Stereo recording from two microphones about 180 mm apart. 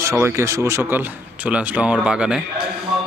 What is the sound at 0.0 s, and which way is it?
Speech, 15° right (ahead or behind).